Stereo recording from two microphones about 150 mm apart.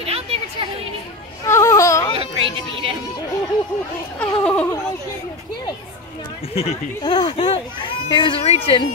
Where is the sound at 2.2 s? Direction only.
35° right (ahead or behind).